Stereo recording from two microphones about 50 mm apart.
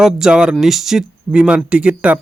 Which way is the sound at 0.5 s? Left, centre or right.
Centre.